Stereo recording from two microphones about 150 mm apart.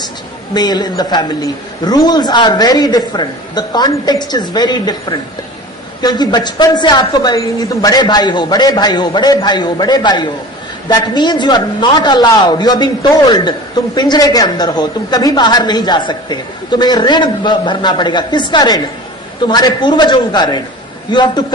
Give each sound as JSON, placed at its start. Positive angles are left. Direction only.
{"t": 0.5, "sound": "a man's voice", "side_deg": 25}